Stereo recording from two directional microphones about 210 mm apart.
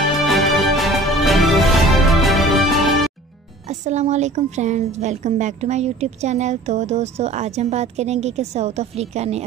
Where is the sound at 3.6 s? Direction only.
35° right (ahead or behind).